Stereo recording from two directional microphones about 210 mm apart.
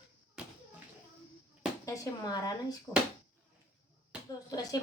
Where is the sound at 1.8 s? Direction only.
15° left (ahead or behind).